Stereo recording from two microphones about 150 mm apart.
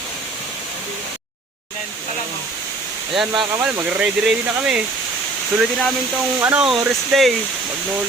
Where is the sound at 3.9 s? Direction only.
5° right (ahead or behind).